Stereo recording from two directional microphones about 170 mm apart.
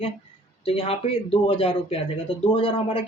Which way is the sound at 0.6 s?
35° left (ahead or behind).